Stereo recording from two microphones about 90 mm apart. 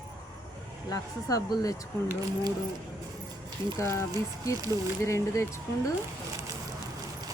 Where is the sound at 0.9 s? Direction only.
40° left (ahead or behind).